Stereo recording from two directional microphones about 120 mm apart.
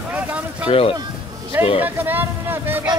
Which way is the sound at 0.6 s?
50° left (ahead or behind).